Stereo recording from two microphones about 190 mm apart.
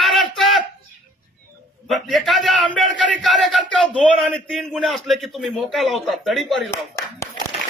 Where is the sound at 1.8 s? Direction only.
Centre (ahead or behind).